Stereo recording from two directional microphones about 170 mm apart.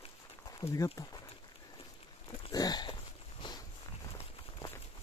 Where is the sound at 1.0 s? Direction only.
20° left (ahead or behind).